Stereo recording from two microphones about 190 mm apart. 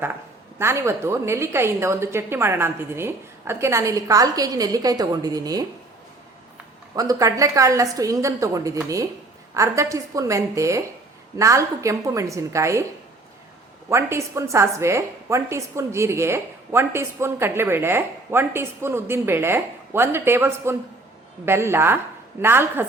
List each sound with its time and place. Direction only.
0.6 s a woman's voice: 15° right (ahead or behind)
6.9 s a woman's voice: 20° right (ahead or behind)
13.9 s a woman's voice: 15° right (ahead or behind)